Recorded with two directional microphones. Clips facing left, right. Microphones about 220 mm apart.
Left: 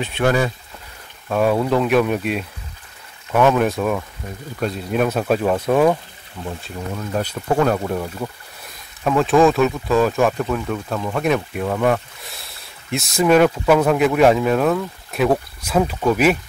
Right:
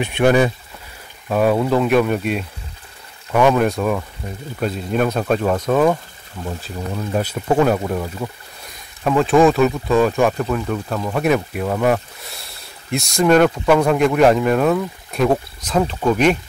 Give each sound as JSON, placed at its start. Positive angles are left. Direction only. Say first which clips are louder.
{"t": 0.0, "sound": "speech", "louder": "right 4 dB", "side_deg": -15}
{"t": 1.3, "sound": "speech", "louder": "right 1 dB", "side_deg": 0}